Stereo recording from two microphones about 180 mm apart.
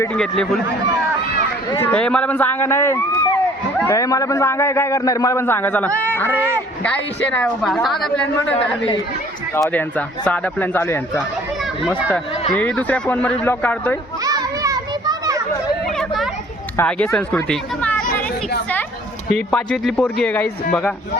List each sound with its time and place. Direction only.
0.0 s a woman's voice: 5° left (ahead or behind)
1.8 s a man's voice: 5° left (ahead or behind)
6.3 s a man's voice: 10° right (ahead or behind)
7.3 s a woman's voice: 5° left (ahead or behind)
10.2 s a man's voice: 10° left (ahead or behind)
11.9 s a man's voice: 10° right (ahead or behind)
12.5 s a man's voice: 10° left (ahead or behind)
14.3 s children playing: 20° right (ahead or behind)
16.0 s a sound: centre (ahead or behind)
16.7 s a man's voice: 5° left (ahead or behind)
18.0 s chatter: 50° left (ahead or behind)
19.5 s a woman's voice: 5° left (ahead or behind)